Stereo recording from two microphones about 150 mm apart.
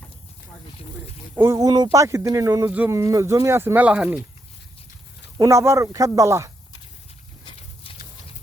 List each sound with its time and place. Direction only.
1.4 s speech: 20° right (ahead or behind); by 4.2 s 5° right (ahead or behind)
5.4 s speech: 20° right (ahead or behind)
7.4 s horse: 40° left (ahead or behind)